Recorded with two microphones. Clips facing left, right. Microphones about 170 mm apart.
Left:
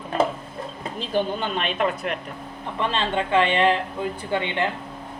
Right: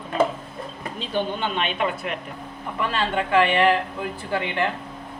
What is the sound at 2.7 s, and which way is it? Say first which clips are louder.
Speech: even; 25° left (ahead or behind).